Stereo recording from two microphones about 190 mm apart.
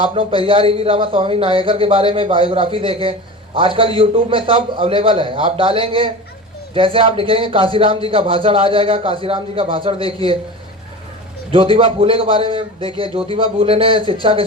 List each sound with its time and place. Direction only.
0.0 s a man's voice: 30° right (ahead or behind)
11.5 s a man's voice: 30° right (ahead or behind)